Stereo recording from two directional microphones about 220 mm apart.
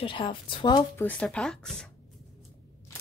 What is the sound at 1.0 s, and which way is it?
Music, 5° left (ahead or behind).